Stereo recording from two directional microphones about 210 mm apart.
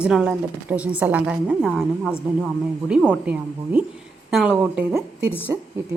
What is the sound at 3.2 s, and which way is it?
Speech, 5° right (ahead or behind).